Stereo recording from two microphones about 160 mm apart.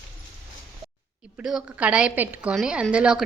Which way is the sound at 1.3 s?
5° right (ahead or behind).